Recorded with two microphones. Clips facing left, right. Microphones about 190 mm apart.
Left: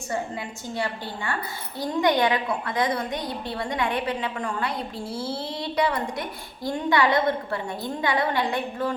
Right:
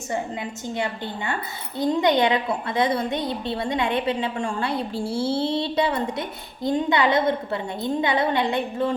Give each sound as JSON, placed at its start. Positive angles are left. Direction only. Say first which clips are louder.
{"t": 0.7, "sound": "a woman's voice", "louder": "right 1 dB", "side_deg": -20}